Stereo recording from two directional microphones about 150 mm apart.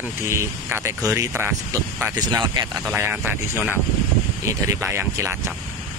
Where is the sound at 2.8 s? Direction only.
10° right (ahead or behind).